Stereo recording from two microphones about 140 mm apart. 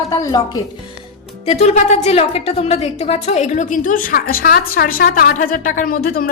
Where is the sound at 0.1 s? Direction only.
25° left (ahead or behind).